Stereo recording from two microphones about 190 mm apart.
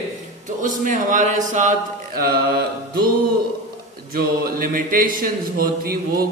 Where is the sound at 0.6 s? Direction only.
45° right (ahead or behind).